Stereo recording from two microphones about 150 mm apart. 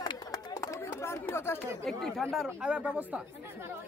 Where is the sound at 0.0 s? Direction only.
25° left (ahead or behind).